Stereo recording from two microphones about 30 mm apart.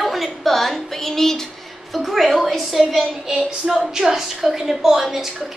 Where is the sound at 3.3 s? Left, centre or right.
Centre.